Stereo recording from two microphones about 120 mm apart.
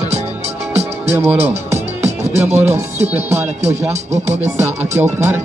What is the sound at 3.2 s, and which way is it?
Speech, 70° right (ahead or behind).